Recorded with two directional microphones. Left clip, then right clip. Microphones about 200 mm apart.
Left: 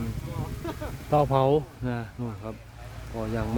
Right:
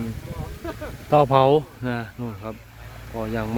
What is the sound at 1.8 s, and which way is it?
Speech, centre (ahead or behind).